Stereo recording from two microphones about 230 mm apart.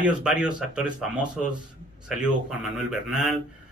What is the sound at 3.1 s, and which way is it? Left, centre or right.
Speech, centre.